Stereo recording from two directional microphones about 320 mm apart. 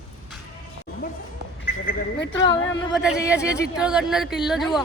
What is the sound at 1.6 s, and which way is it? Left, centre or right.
Speech, left.